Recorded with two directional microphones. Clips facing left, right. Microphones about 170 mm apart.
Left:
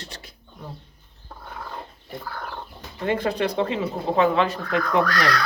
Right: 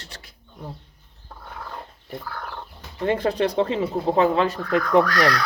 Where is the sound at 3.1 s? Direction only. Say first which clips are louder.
Right 2 dB; 35° right (ahead or behind).